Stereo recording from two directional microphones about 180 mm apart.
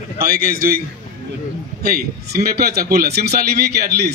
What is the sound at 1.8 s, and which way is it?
A man's voice, 55° right (ahead or behind).